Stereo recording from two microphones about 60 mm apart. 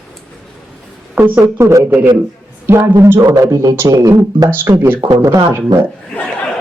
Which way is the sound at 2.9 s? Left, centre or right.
Right.